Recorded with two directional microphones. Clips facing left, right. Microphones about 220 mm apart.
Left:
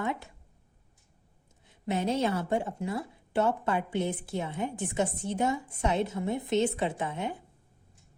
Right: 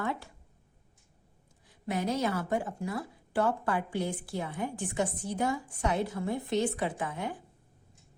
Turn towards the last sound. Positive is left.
turn(degrees=20)  # may be behind; listen again after turning